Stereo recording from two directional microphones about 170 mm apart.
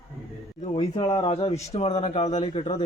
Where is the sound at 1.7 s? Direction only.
40° left (ahead or behind).